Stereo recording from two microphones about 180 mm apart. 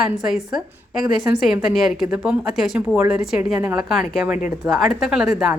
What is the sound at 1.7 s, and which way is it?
A woman's voice, centre (ahead or behind).